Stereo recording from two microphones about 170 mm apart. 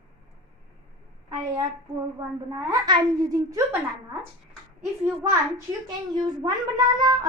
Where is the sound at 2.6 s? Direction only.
25° right (ahead or behind).